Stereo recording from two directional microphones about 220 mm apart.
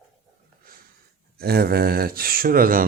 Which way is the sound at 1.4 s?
45° right (ahead or behind).